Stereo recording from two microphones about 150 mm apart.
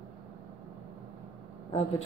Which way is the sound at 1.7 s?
45° left (ahead or behind).